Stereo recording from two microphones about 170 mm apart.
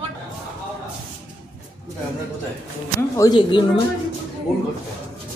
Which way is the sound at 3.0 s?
20° left (ahead or behind).